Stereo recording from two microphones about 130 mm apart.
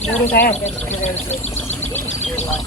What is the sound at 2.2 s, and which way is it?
Bird, 60° left (ahead or behind).